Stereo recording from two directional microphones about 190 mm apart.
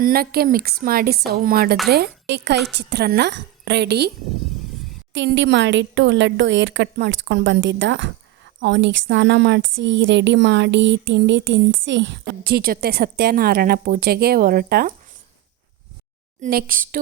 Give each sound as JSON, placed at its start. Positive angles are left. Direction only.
{"t": 0.0, "sound": "a woman's voice", "side_deg": -50}
{"t": 2.3, "sound": "a woman's voice", "side_deg": -60}
{"t": 5.1, "sound": "speech", "side_deg": -70}
{"t": 16.4, "sound": "a woman's voice", "side_deg": -50}